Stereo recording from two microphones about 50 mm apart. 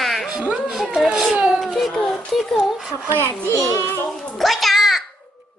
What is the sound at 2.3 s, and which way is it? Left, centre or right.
Child singing, centre.